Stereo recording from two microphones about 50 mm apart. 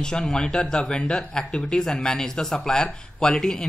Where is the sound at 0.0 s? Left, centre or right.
Centre.